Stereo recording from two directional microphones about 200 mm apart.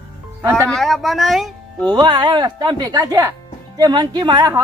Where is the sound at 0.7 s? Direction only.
Centre (ahead or behind).